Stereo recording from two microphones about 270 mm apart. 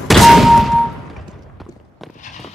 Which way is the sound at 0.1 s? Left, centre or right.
Centre.